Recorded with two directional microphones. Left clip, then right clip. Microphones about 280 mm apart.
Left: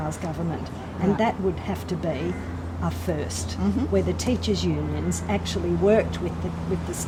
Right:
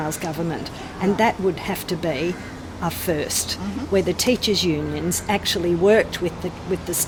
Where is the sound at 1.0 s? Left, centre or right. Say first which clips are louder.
Right 4 dB; right.